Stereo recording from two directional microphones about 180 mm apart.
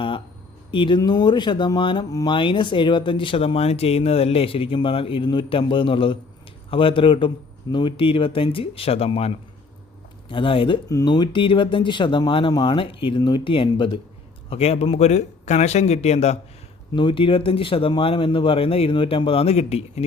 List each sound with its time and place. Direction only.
0.7 s a man's voice: 25° left (ahead or behind)